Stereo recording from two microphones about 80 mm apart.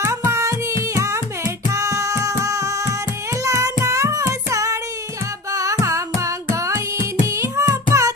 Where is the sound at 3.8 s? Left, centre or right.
Right.